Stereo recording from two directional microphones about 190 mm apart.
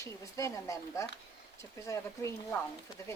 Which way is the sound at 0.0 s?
15° left (ahead or behind).